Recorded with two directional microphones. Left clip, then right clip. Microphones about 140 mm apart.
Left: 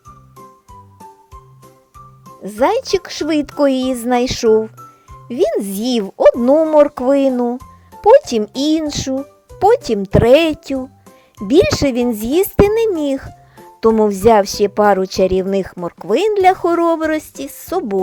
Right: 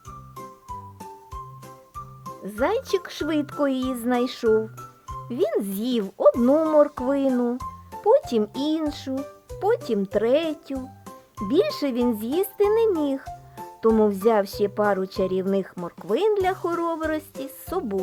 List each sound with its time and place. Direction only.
0.3 s music: centre (ahead or behind)
2.4 s speech: 35° left (ahead or behind)
6.4 s speech: 20° left (ahead or behind)
6.8 s speech: 40° left (ahead or behind)
7.3 s speech: 20° left (ahead or behind)
8.0 s speech: 35° left (ahead or behind)